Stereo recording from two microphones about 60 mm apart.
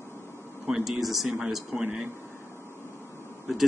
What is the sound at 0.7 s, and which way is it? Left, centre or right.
Speech, centre.